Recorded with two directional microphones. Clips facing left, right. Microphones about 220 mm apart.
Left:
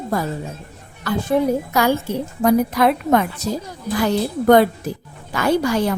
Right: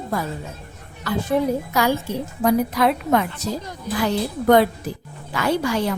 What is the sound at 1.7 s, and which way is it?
Speech, 50° left (ahead or behind).